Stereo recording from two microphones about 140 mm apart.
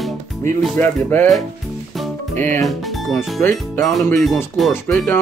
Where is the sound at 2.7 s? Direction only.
Centre (ahead or behind).